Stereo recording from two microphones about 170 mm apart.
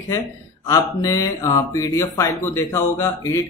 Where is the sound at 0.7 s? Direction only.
20° left (ahead or behind).